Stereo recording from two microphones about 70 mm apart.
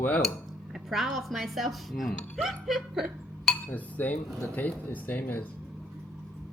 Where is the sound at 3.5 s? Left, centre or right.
Left.